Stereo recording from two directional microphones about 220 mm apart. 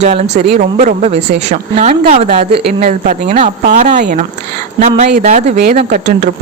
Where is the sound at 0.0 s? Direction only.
30° right (ahead or behind).